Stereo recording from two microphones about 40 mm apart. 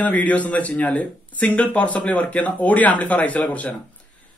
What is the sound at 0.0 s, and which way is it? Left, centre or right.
A man's voice, left.